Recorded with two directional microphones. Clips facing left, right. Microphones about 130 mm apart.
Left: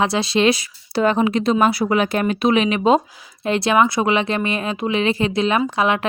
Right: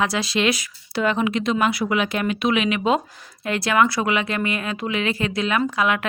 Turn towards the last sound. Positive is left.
turn(degrees=25)  # may be behind; listen again after turning